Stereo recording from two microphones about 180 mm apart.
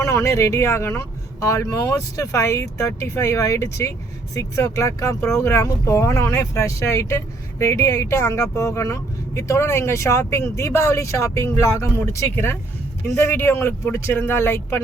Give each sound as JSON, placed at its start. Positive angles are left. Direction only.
{"t": 0.0, "sound": "speech", "side_deg": 15}